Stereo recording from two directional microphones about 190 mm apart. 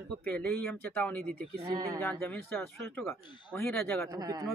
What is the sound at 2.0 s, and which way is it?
Speech, 10° left (ahead or behind).